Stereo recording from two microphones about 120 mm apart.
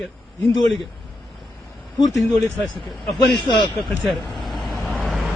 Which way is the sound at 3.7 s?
Centre (ahead or behind).